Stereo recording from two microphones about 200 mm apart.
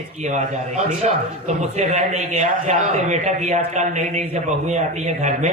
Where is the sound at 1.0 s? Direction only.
35° right (ahead or behind).